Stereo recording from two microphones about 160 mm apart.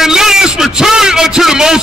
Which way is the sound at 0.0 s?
5° right (ahead or behind).